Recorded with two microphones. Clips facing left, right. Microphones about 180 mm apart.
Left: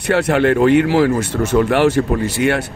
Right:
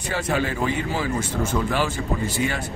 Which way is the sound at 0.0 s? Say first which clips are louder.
Left 10 dB; 70° left (ahead or behind).